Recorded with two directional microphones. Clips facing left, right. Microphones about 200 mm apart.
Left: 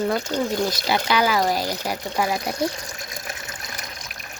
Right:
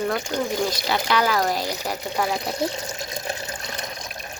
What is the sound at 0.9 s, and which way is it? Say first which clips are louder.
Speech: left 2 dB; 5° left (ahead or behind).